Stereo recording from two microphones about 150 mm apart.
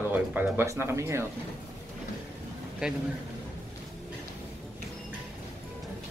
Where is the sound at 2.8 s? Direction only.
5° right (ahead or behind).